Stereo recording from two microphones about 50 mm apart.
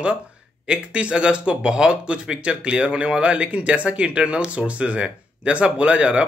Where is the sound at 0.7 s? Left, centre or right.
Right.